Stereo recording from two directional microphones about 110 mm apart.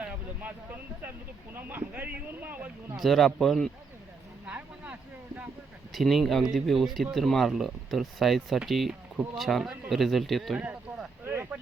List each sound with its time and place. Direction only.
0.0 s speech: 15° right (ahead or behind)
3.0 s speech: centre (ahead or behind)
4.4 s speech: 15° right (ahead or behind)
5.9 s speech: centre (ahead or behind)
10.6 s a sound: 10° right (ahead or behind)
11.3 s speech: 20° right (ahead or behind)